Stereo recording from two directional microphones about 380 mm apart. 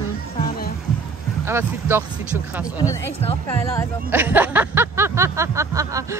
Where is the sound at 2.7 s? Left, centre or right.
Centre.